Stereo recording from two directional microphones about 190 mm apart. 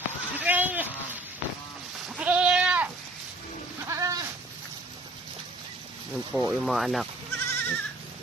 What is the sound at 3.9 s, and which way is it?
Goat, 15° right (ahead or behind).